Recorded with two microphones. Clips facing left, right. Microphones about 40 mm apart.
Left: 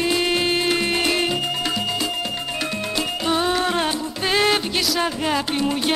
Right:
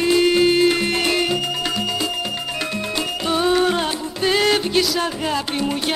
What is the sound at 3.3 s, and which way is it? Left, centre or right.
Music, centre.